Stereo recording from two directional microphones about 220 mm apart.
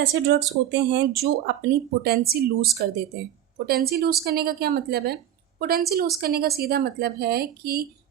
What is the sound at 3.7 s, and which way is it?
A woman's voice, 45° right (ahead or behind).